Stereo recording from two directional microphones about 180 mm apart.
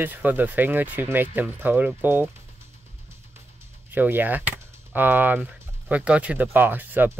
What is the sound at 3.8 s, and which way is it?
Speech, 10° right (ahead or behind).